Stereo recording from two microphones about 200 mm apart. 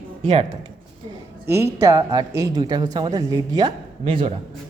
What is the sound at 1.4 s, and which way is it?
A woman's voice, 15° right (ahead or behind).